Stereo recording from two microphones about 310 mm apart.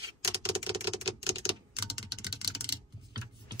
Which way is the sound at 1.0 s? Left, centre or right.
Centre.